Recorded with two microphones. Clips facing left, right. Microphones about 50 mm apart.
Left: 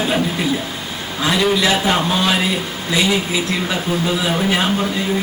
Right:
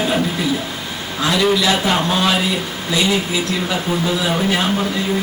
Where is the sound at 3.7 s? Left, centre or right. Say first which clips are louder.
Right 1 dB; centre.